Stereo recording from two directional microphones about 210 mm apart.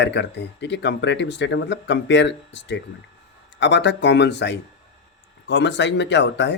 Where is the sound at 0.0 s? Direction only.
55° left (ahead or behind).